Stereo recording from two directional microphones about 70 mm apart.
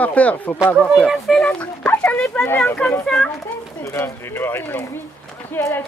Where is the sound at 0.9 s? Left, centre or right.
Centre.